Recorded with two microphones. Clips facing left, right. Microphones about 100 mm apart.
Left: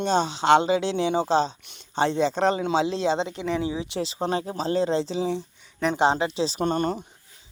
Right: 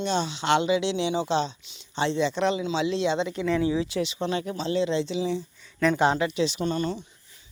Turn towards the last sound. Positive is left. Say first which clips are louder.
# left 3 dB
turn(degrees=50)  # may be behind; listen again after turning